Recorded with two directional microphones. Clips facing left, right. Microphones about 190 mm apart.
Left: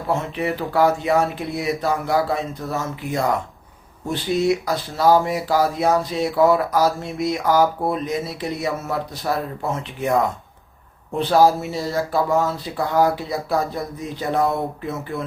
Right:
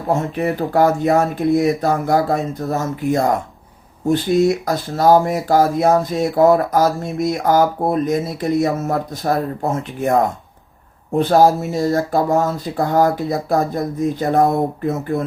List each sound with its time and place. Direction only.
0.1 s speech: 45° right (ahead or behind)